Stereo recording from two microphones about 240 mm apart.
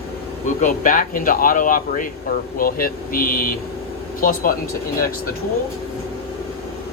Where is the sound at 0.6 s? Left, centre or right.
Left.